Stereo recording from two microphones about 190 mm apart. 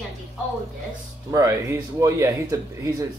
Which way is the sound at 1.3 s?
15° right (ahead or behind).